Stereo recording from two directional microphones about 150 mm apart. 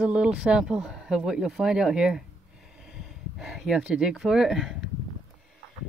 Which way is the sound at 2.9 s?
Centre (ahead or behind).